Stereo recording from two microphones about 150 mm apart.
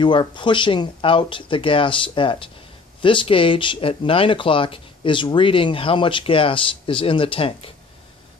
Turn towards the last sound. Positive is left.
turn(degrees=35)  # may be behind; listen again after turning